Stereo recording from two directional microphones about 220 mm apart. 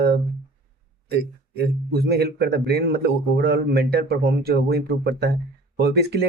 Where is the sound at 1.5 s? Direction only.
45° right (ahead or behind).